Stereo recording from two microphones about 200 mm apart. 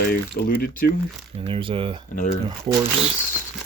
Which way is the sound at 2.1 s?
40° left (ahead or behind).